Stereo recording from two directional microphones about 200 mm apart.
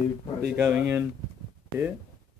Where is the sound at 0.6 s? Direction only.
10° right (ahead or behind).